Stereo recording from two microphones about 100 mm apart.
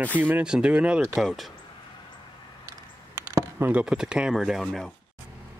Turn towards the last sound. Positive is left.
turn(degrees=5)  # may be behind; listen again after turning